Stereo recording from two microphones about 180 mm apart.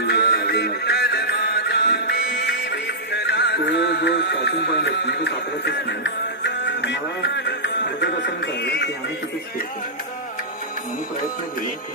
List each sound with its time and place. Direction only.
0.0 s music: 65° left (ahead or behind)